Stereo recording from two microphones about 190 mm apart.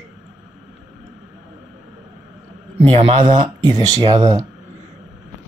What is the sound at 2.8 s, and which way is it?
Speech, 30° right (ahead or behind).